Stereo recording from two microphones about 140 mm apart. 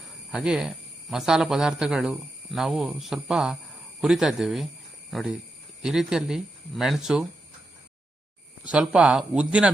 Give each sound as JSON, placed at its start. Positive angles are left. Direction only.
{"t": 0.3, "sound": "a man's voice", "side_deg": -5}
{"t": 8.6, "sound": "speech", "side_deg": -5}